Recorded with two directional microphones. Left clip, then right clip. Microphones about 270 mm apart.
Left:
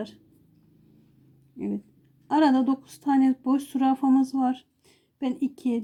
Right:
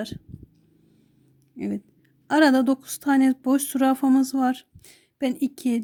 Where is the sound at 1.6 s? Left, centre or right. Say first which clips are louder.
Right 2 dB; right.